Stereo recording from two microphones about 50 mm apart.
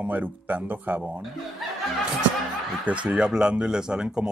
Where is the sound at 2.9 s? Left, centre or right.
Right.